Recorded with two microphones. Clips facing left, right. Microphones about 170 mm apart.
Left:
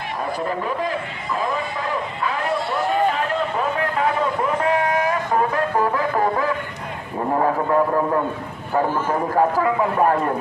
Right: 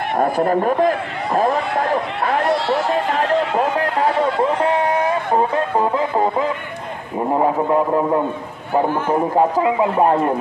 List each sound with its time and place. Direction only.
0.2 s speech: 55° right (ahead or behind)
2.4 s run: 90° right
4.4 s a sound: 25° right (ahead or behind)
5.8 s music: 20° right (ahead or behind)
7.3 s speech: 20° right (ahead or behind)
9.3 s speech: 20° right (ahead or behind)